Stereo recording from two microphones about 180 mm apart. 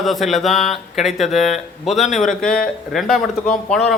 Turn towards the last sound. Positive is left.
turn(degrees=5)  # may be behind; listen again after turning